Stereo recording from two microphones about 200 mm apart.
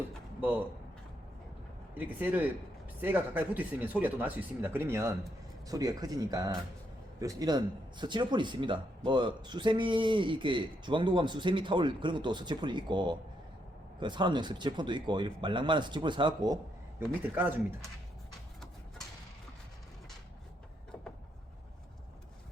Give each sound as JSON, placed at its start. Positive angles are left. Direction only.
{"t": 2.0, "sound": "a man's voice", "side_deg": -10}
{"t": 17.3, "sound": "speech", "side_deg": -10}